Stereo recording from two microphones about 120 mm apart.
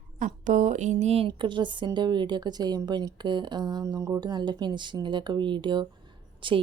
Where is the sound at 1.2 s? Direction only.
45° right (ahead or behind).